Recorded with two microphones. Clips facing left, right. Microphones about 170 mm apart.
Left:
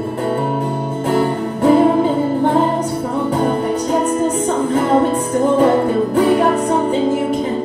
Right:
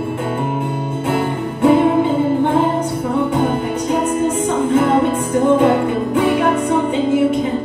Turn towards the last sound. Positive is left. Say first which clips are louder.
# left 2 dB
turn(degrees=40)  # may be behind; listen again after turning